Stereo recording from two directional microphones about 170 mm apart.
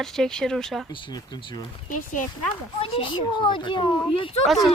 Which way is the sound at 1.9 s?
50° left (ahead or behind).